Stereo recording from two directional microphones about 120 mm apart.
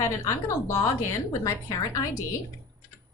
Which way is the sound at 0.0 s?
25° left (ahead or behind).